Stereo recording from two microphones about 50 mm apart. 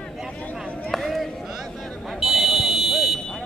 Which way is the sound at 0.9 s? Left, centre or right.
Centre.